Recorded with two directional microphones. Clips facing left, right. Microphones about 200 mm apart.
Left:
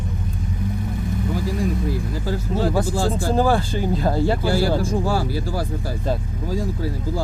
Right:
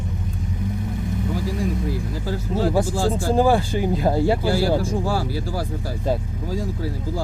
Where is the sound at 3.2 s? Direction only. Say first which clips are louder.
Right 2 dB; 15° right (ahead or behind).